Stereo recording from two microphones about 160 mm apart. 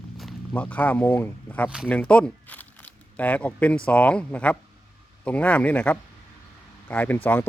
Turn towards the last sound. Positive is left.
turn(degrees=10)  # may be behind; listen again after turning